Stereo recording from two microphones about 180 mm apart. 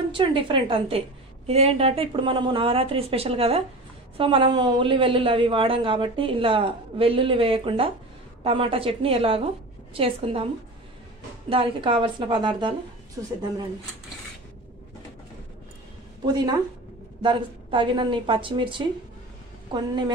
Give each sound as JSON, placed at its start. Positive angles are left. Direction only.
{"t": 0.1, "sound": "a woman's voice", "side_deg": -30}
{"t": 16.3, "sound": "a woman's voice", "side_deg": -25}